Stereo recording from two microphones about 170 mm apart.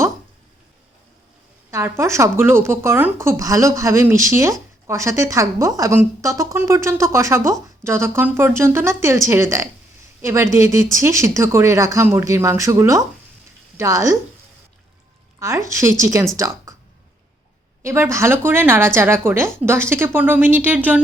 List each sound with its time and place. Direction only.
1.7 s a woman's voice: 15° right (ahead or behind)
15.4 s a woman's voice: 15° right (ahead or behind)
17.8 s a woman's voice: 15° right (ahead or behind)